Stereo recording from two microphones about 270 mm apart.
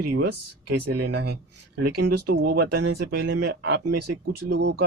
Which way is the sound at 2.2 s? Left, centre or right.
Right.